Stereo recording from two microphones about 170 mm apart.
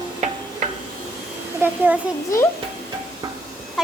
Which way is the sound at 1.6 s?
15° right (ahead or behind).